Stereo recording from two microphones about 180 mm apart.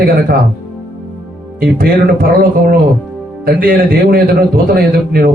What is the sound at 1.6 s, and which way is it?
Speech, 55° right (ahead or behind).